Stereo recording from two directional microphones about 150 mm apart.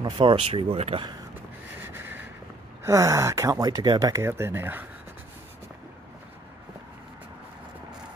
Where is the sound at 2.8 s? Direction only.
20° right (ahead or behind).